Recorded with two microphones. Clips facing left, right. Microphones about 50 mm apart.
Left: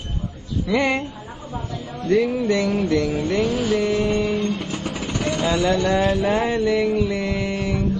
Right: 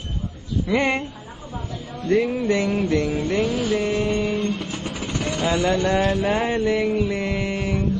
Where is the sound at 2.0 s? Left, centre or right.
Right.